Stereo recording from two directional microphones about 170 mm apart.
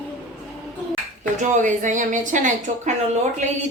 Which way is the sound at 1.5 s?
45° right (ahead or behind).